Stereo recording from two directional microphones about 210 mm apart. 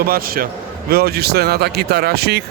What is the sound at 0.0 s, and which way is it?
Speech, 45° right (ahead or behind).